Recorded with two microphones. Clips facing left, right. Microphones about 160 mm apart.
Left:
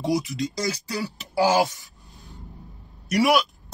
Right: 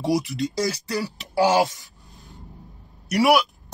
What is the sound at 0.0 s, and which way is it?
Speech, centre (ahead or behind).